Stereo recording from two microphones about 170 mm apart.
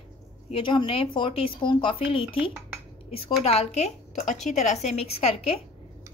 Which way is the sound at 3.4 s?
40° left (ahead or behind).